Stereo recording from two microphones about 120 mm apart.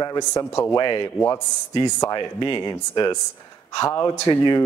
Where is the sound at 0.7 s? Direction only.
35° left (ahead or behind).